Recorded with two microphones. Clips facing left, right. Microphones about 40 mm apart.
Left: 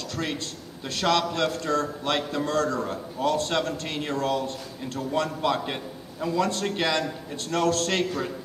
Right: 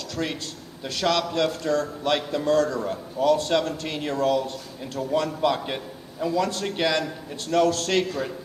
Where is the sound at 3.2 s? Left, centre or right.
Left.